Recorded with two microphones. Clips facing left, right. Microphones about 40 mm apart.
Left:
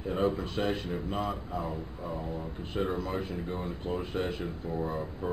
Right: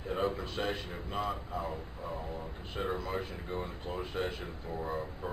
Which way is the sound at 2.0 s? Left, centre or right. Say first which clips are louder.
Left 3 dB; left.